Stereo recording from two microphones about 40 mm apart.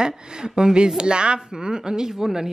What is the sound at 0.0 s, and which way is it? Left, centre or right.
A woman's voice, centre.